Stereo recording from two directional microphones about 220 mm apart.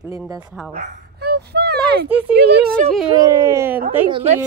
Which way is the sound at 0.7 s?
40° right (ahead or behind).